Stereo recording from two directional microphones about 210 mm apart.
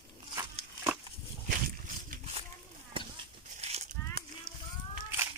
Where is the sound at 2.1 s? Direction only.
30° right (ahead or behind).